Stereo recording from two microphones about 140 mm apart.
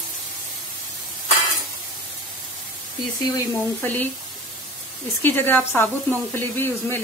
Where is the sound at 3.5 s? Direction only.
15° left (ahead or behind).